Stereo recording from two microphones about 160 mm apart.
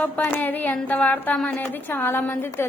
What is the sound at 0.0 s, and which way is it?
A woman's voice, 10° left (ahead or behind).